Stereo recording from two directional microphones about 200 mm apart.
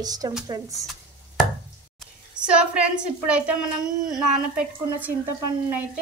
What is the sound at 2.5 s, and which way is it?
Speech, 5° right (ahead or behind).